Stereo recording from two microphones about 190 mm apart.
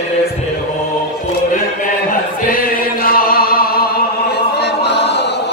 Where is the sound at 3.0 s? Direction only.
50° left (ahead or behind).